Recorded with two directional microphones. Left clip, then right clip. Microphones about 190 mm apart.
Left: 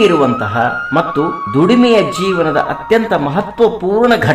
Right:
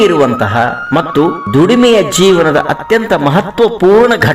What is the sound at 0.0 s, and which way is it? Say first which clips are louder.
Speech: right 2 dB; 25° right (ahead or behind).